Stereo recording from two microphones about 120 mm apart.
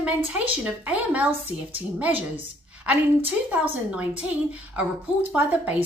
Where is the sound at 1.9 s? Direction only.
10° right (ahead or behind).